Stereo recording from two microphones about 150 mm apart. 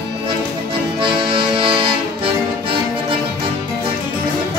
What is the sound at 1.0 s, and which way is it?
Accordion, 35° right (ahead or behind).